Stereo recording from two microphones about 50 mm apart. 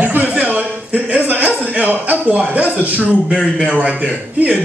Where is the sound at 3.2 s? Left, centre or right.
Centre.